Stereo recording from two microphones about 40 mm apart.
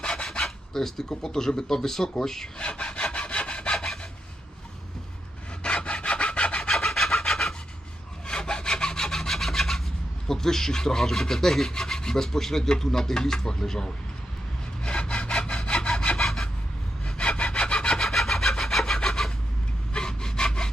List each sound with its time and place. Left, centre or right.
0.0 s rub: centre
2.6 s sawing: left
5.6 s sawing: left
6.6 s rub: centre
8.3 s sawing: left; by 9.8 s centre
10.2 s rub: centre
14.8 s sawing: left
16.2 s rub: centre
17.2 s sawing: left